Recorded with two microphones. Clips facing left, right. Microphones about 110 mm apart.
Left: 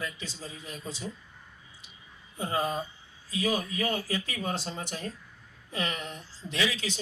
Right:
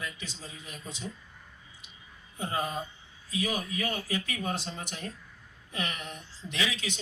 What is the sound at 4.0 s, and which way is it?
Speech, 25° right (ahead or behind).